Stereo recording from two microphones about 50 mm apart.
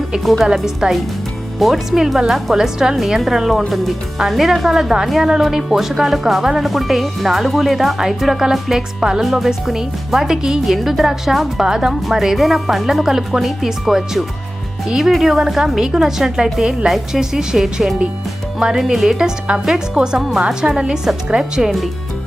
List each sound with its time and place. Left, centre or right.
0.4 s a woman's voice: centre
10.7 s a woman's voice: centre